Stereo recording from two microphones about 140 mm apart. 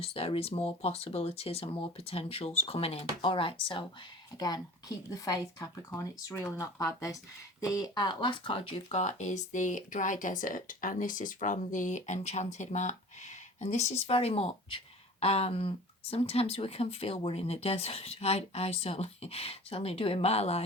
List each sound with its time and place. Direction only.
0.0 s speech: 45° left (ahead or behind)